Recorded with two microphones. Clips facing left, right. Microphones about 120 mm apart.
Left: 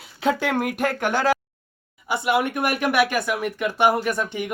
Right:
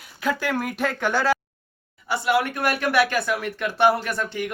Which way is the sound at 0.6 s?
15° left (ahead or behind).